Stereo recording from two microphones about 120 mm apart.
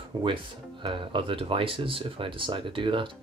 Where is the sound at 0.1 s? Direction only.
40° right (ahead or behind).